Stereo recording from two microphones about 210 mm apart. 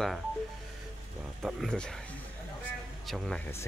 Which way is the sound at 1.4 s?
Centre (ahead or behind).